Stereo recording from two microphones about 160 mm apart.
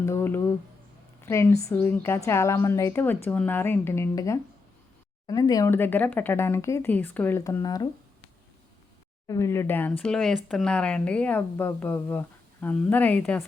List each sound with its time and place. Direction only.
0.0 s speech: 15° left (ahead or behind)
9.2 s speech: 20° left (ahead or behind)